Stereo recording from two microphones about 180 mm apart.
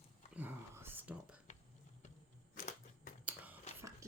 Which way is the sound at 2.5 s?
50° left (ahead or behind).